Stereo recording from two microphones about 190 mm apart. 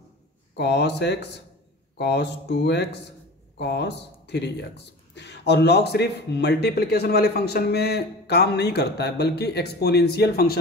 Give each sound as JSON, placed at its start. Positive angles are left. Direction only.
{"t": 0.6, "sound": "a man's voice", "side_deg": 65}